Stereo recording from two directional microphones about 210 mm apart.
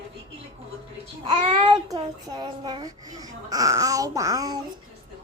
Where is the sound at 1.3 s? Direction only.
25° right (ahead or behind).